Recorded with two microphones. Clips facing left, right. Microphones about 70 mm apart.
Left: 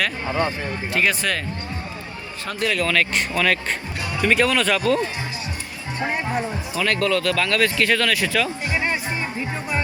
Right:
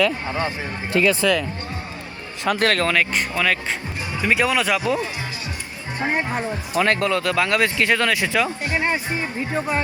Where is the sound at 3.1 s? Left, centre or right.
Centre.